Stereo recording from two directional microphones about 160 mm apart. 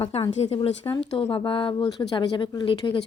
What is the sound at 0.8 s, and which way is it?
A woman's voice, 25° left (ahead or behind).